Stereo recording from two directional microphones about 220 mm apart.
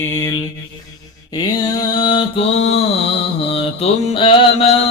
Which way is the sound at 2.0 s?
20° left (ahead or behind).